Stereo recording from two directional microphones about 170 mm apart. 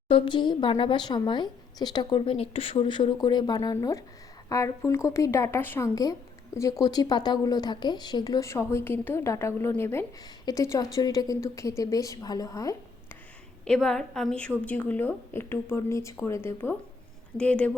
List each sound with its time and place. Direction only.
0.1 s a woman's voice: 30° left (ahead or behind)
13.7 s a woman's voice: 5° left (ahead or behind)